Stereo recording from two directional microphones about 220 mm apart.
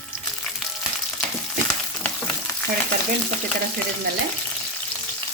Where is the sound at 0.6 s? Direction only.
Centre (ahead or behind).